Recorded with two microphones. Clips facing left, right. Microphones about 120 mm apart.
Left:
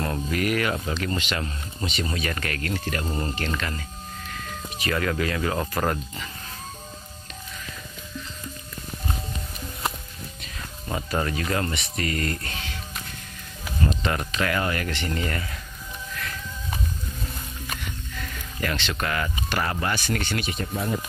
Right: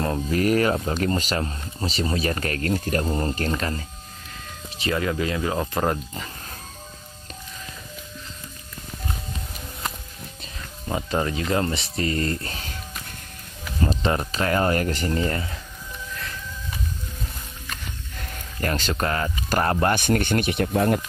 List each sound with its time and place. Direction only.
0.0 s speech: 30° right (ahead or behind)
10.9 s speech: 15° right (ahead or behind); by 12.7 s 35° right (ahead or behind)
13.8 s speech: 35° right (ahead or behind)
18.2 s speech: 45° right (ahead or behind)
19.5 s speech: 45° right (ahead or behind); by 21.0 s 60° right (ahead or behind)